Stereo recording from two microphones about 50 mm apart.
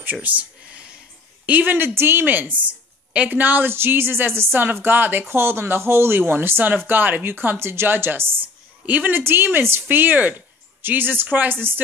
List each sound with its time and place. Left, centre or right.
0.0 s a woman's voice: right
2.0 s a woman's voice: right
5.3 s speech: right